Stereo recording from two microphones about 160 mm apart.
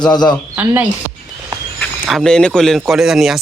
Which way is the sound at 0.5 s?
10° right (ahead or behind).